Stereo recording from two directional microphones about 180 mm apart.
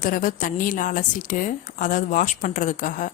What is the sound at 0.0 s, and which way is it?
A woman's voice, 50° left (ahead or behind).